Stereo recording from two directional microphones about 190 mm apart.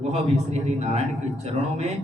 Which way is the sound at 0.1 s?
35° right (ahead or behind).